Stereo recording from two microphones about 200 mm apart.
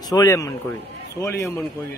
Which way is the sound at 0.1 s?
15° left (ahead or behind).